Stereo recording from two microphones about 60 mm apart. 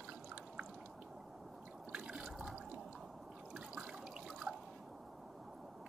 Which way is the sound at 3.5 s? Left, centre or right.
Centre.